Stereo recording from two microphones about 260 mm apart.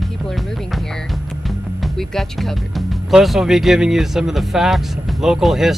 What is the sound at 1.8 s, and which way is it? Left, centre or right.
Speech, centre.